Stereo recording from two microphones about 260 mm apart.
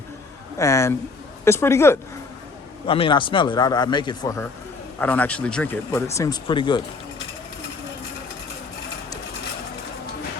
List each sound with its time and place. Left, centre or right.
0.6 s speech: centre